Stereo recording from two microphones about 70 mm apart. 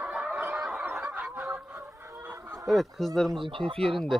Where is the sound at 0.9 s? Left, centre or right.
Centre.